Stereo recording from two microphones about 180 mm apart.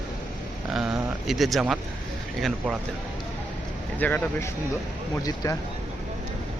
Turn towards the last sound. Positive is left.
turn(degrees=20)  # may be behind; listen again after turning